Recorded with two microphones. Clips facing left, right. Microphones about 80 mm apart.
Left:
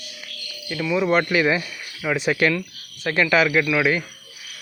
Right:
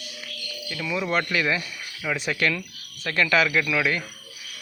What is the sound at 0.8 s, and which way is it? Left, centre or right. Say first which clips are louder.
Speech: left 6 dB; centre.